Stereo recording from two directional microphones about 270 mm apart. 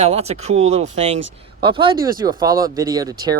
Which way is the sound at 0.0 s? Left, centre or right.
Right.